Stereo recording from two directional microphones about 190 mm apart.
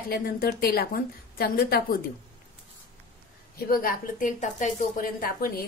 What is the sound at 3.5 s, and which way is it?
A woman's voice, 50° left (ahead or behind).